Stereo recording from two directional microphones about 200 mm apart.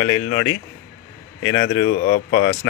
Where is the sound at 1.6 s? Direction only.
50° left (ahead or behind).